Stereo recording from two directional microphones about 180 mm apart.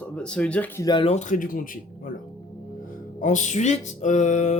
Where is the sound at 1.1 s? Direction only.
45° left (ahead or behind).